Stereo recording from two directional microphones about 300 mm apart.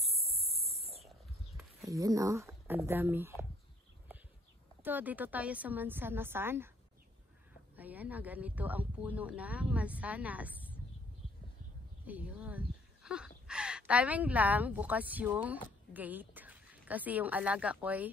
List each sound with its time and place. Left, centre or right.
0.0 s a sound: centre
1.6 s speech: centre
4.8 s a woman's voice: centre
7.7 s speech: centre
12.1 s a woman's voice: centre